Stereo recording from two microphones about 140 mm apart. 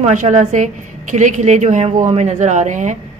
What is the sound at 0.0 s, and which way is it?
A woman's voice, 60° right (ahead or behind).